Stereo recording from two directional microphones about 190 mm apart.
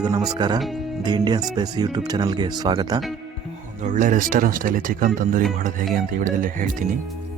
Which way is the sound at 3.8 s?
45° right (ahead or behind).